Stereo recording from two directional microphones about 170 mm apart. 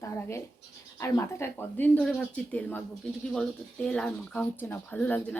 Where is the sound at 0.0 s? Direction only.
15° left (ahead or behind).